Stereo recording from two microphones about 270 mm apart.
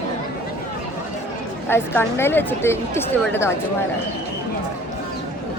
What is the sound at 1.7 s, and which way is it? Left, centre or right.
A woman's voice, centre.